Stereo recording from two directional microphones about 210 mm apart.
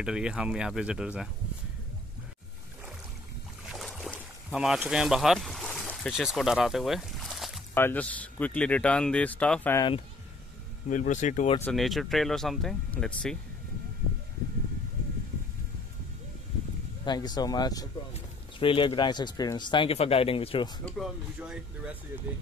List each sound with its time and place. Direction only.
0.0 s speech: 5° right (ahead or behind)
3.6 s boat: centre (ahead or behind)
7.7 s speech: 10° left (ahead or behind)
10.9 s speech: 35° left (ahead or behind)
11.6 s speech: centre (ahead or behind)
17.0 s speech: 20° left (ahead or behind)
20.8 s speech: centre (ahead or behind)